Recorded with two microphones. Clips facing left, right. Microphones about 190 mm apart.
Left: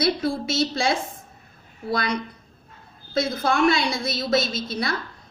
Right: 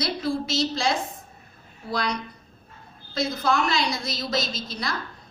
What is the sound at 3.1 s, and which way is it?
A woman's voice, 55° left (ahead or behind).